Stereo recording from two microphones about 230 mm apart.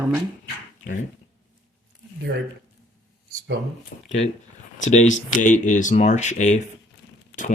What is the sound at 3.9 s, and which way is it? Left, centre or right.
Speech, left.